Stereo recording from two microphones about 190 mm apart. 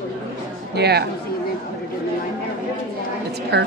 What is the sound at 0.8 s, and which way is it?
Speech, 60° right (ahead or behind).